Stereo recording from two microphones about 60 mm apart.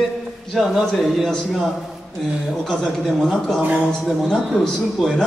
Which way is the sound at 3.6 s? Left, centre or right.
Right.